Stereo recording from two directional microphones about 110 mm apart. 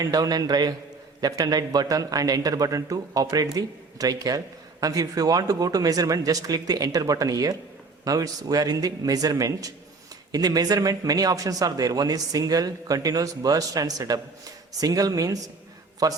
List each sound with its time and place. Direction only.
0.0 s speech: 35° right (ahead or behind)